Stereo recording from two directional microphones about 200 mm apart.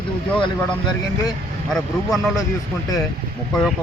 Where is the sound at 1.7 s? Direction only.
Centre (ahead or behind).